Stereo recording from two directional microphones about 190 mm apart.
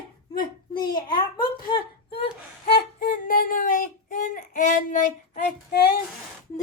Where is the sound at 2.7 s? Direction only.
50° left (ahead or behind).